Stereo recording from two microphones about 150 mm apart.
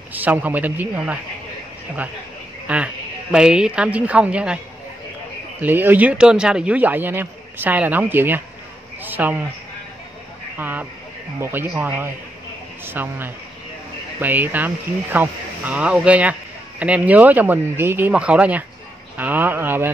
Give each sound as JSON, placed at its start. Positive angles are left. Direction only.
{"t": 0.1, "sound": "speech", "side_deg": -10}
{"t": 2.7, "sound": "speech", "side_deg": -5}
{"t": 5.6, "sound": "speech", "side_deg": -15}
{"t": 10.6, "sound": "speech", "side_deg": -10}